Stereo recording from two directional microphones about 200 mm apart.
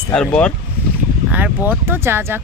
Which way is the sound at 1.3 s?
10° right (ahead or behind).